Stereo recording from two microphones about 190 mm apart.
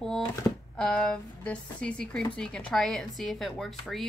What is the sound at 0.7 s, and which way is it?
Speech, 5° left (ahead or behind).